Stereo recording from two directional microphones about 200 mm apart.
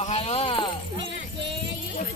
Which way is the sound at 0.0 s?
30° left (ahead or behind).